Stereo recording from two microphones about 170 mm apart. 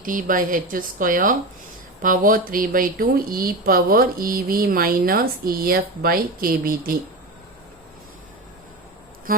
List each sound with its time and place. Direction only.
0.0 s a woman's voice: 50° right (ahead or behind)